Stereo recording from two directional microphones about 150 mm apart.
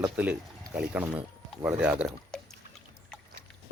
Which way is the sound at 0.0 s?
10° right (ahead or behind).